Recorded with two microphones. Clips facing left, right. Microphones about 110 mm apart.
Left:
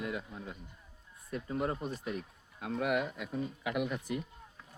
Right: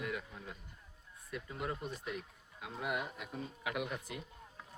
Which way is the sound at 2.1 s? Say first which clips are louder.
Left 4 dB; 40° left (ahead or behind).